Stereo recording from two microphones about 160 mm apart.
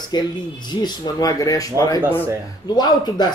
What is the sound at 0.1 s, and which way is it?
Speech, 25° left (ahead or behind).